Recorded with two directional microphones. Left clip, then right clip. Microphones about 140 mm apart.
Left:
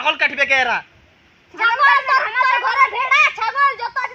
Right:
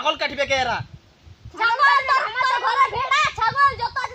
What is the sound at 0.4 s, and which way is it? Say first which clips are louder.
Speech: left 5 dB; 45° right (ahead or behind).